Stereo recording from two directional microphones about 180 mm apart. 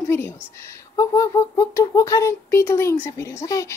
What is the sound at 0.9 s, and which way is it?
Speech, 20° left (ahead or behind).